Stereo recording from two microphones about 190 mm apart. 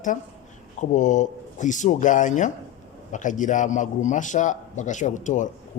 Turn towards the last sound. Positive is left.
turn(degrees=40)  # may be behind; listen again after turning